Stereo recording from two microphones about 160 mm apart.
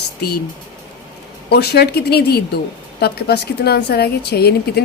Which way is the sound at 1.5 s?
90° left.